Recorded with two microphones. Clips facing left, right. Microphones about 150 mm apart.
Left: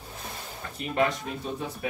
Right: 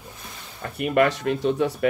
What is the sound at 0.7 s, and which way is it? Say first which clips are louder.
Speech: right 6 dB; 65° right (ahead or behind).